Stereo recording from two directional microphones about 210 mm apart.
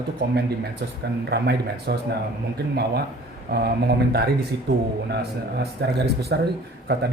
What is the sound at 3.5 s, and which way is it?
Speech, 45° right (ahead or behind).